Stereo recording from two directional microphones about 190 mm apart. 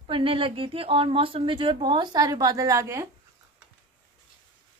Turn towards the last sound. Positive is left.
turn(degrees=-15)  # may be behind; listen again after turning